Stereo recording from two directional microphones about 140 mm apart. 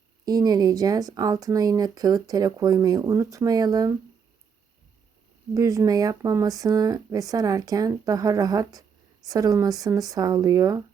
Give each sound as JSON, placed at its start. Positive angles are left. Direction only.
{"t": 0.3, "sound": "speech", "side_deg": -30}
{"t": 5.5, "sound": "speech", "side_deg": -25}